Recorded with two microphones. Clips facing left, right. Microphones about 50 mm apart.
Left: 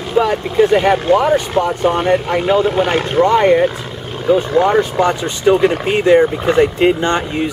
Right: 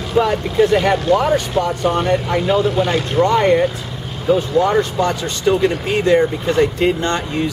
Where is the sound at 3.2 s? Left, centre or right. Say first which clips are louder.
Left 3 dB; centre.